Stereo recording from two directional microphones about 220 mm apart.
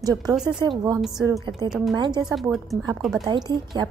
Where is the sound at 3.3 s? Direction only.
20° right (ahead or behind).